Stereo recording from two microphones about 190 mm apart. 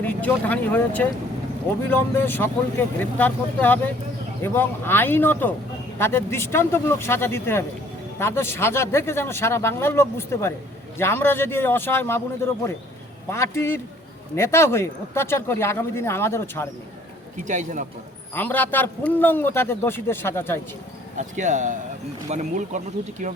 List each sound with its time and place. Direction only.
0.0 s speech: 10° left (ahead or behind)
13.3 s speech: 15° left (ahead or behind)
17.3 s speech: 40° right (ahead or behind)
18.3 s speech: 10° left (ahead or behind)
21.2 s speech: 40° right (ahead or behind)